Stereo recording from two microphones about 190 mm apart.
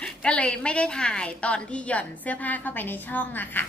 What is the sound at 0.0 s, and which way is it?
A woman's voice, 5° left (ahead or behind).